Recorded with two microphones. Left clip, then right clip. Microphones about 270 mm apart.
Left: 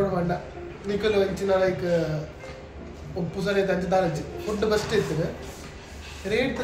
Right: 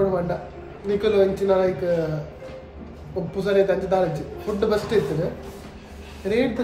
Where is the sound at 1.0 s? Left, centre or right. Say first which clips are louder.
Right 4 dB; centre.